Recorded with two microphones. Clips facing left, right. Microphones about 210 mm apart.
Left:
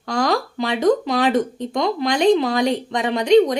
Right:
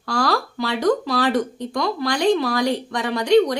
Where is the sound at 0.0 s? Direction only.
20° left (ahead or behind).